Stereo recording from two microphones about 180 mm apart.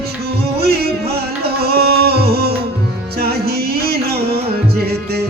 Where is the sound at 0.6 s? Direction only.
60° right (ahead or behind).